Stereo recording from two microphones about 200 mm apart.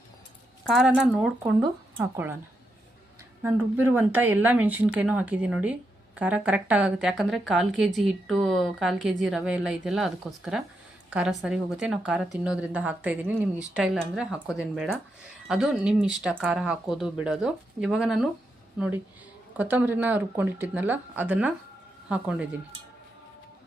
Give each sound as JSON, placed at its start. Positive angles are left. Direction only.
{"t": 0.7, "sound": "speech", "side_deg": 0}
{"t": 3.4, "sound": "speech", "side_deg": -10}
{"t": 19.5, "sound": "speech", "side_deg": -10}